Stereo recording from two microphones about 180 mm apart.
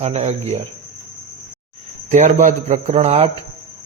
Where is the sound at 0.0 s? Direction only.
35° right (ahead or behind).